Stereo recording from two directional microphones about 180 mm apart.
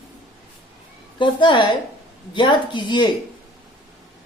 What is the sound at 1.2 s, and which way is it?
Speech, 25° left (ahead or behind).